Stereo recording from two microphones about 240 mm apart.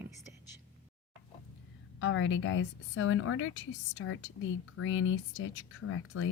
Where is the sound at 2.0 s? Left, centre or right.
Left.